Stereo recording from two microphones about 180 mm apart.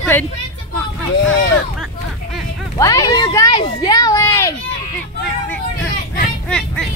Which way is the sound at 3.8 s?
20° left (ahead or behind).